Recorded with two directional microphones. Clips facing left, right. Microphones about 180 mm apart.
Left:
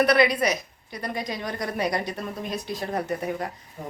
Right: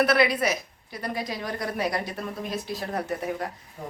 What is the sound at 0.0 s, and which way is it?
A woman's voice, 5° right (ahead or behind).